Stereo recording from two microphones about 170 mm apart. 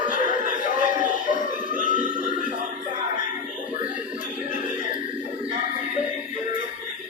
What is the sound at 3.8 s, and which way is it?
Music, 50° left (ahead or behind).